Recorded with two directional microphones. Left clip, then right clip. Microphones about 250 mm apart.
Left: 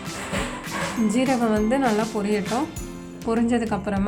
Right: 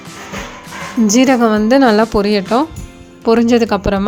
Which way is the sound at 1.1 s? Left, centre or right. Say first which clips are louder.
Right 12 dB; right.